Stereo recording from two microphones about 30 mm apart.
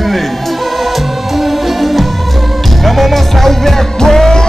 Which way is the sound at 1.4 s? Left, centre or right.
Centre.